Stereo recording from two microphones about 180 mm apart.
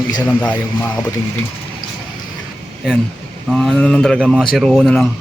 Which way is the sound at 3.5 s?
Centre (ahead or behind).